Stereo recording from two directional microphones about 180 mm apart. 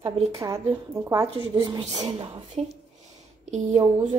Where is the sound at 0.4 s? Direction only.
15° right (ahead or behind).